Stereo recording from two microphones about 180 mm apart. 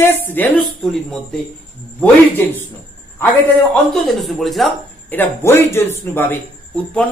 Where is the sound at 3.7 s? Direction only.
Centre (ahead or behind).